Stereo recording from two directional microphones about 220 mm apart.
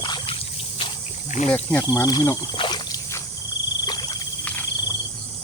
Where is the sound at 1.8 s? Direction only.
15° left (ahead or behind).